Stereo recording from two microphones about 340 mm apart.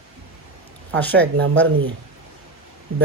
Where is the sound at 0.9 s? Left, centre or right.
Centre.